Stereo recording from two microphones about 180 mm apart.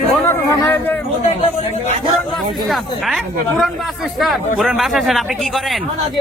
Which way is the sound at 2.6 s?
Centre (ahead or behind).